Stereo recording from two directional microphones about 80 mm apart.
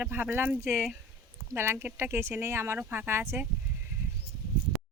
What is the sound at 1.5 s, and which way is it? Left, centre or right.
Speech, right.